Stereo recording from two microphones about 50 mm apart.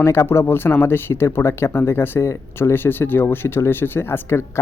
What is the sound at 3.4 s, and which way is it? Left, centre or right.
Speech, left.